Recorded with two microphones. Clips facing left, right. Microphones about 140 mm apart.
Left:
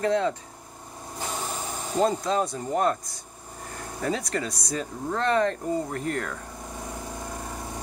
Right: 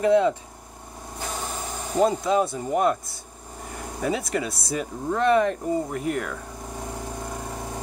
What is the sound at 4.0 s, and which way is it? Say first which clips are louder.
Speech: right 2 dB; 10° right (ahead or behind).